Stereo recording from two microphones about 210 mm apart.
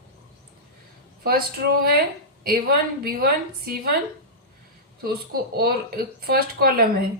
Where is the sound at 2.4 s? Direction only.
45° right (ahead or behind).